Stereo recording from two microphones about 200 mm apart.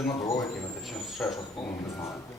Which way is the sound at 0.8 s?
Centre (ahead or behind).